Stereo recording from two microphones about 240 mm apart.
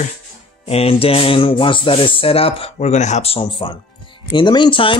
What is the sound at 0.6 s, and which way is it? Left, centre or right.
Music, left.